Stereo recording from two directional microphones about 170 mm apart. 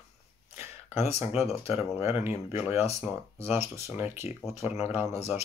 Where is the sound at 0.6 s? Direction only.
40° left (ahead or behind).